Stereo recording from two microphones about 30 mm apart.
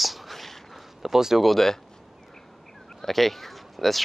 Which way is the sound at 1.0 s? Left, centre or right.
Centre.